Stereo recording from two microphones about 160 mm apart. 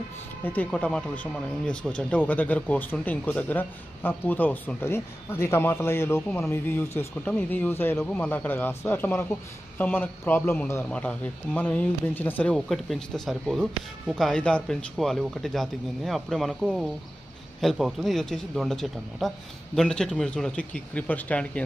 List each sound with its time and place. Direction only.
0.4 s speech: 10° left (ahead or behind)